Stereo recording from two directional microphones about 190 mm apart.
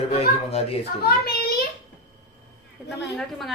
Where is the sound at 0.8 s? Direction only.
55° left (ahead or behind).